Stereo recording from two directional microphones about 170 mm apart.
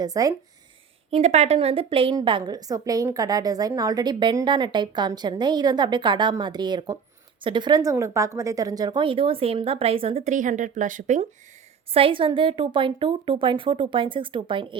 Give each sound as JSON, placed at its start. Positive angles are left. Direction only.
{"t": 0.0, "sound": "a woman's voice", "side_deg": -20}
{"t": 1.1, "sound": "a woman's voice", "side_deg": -40}
{"t": 11.9, "sound": "a woman's voice", "side_deg": -30}